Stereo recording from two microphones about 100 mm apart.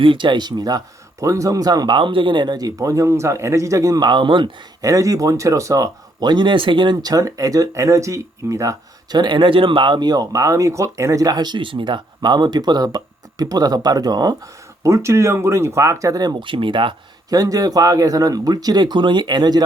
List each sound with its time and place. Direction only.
0.0 s speech: 55° right (ahead or behind)
4.8 s speech: 35° right (ahead or behind); by 6.9 s 55° right (ahead or behind)
6.9 s speech: 35° right (ahead or behind)
9.1 s speech: 50° right (ahead or behind)
14.8 s speech: 30° right (ahead or behind); by 16.9 s 55° right (ahead or behind)
17.2 s speech: 35° right (ahead or behind)